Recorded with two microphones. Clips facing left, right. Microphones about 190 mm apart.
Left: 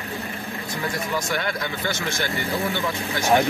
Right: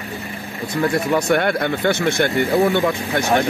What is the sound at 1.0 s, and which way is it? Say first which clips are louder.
Speech: right 10 dB; 60° right (ahead or behind).